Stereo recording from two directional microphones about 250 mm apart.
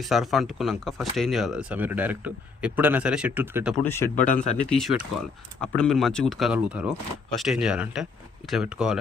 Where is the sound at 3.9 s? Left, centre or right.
Centre.